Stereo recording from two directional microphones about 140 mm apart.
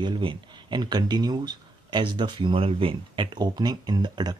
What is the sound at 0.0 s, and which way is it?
Speech, 35° right (ahead or behind).